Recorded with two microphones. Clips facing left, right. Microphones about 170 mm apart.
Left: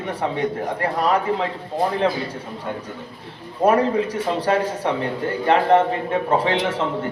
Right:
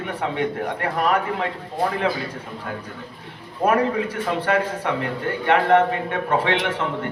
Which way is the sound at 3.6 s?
20° left (ahead or behind).